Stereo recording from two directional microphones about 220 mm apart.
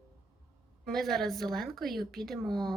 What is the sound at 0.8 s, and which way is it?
A woman's voice, centre (ahead or behind).